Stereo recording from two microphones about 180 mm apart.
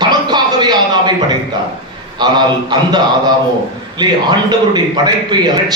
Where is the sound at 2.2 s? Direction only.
25° right (ahead or behind).